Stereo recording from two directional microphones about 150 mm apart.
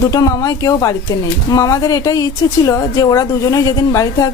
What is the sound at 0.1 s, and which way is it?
A woman's voice, 25° left (ahead or behind).